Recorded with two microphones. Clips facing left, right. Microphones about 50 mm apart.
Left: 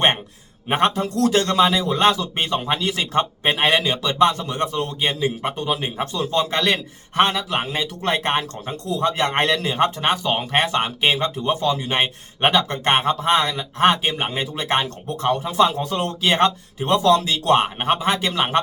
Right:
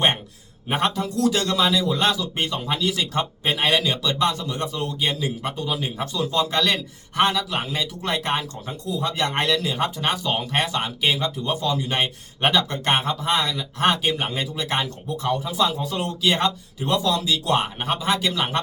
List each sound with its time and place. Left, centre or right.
0.7 s speech: left
5.5 s speech: left
9.1 s speech: left